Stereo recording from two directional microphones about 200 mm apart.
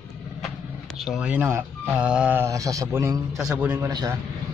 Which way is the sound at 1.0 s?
5° right (ahead or behind).